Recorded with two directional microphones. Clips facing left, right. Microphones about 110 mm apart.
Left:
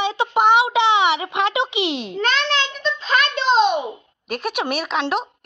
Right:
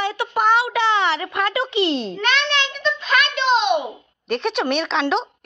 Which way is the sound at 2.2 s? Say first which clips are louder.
Left 5 dB; 35° left (ahead or behind).